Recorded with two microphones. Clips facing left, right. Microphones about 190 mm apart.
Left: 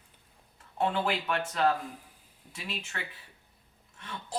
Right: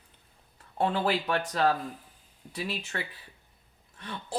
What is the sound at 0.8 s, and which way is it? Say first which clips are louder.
A woman's voice: right 2 dB; 35° right (ahead or behind).